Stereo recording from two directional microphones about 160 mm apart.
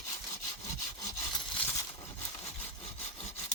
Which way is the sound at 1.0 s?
20° left (ahead or behind).